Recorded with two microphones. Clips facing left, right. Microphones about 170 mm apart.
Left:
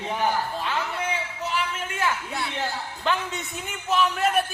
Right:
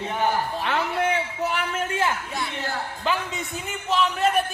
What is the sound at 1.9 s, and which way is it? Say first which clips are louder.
Speech: right 2 dB; 25° right (ahead or behind).